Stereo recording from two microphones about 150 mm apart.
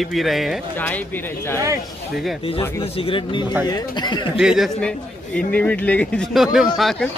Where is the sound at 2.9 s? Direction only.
35° left (ahead or behind).